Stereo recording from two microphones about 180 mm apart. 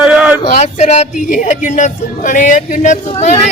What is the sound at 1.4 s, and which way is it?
Speech, 45° left (ahead or behind).